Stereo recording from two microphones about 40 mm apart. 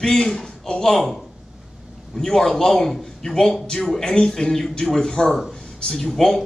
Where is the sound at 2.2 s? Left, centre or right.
Centre.